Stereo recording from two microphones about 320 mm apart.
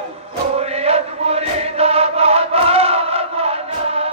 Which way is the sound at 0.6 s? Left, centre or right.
Centre.